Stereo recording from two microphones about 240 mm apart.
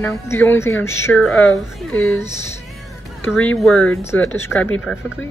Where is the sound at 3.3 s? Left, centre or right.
Centre.